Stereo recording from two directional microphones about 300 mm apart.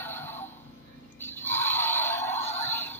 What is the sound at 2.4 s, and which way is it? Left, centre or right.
Synthetic singing, left.